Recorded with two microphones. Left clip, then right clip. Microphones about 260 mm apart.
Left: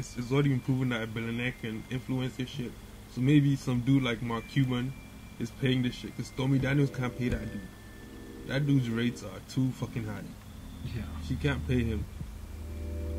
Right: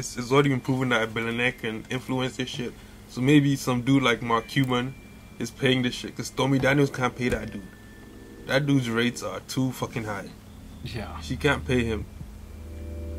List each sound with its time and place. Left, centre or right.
0.0 s speech: centre
8.5 s speech: centre